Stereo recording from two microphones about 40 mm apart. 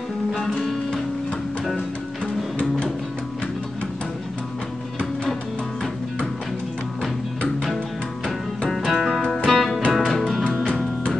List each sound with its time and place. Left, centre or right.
0.3 s music: centre
7.0 s music: centre
9.2 s music: centre
9.5 s music: centre